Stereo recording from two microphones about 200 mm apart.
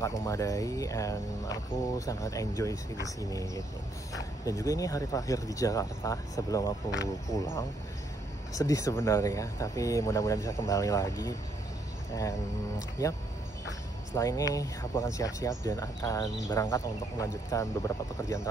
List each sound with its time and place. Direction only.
0.0 s speech: 15° left (ahead or behind)
8.5 s speech: 15° left (ahead or behind)